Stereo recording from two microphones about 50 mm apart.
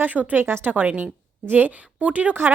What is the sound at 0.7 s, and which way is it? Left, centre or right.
A woman's voice, right.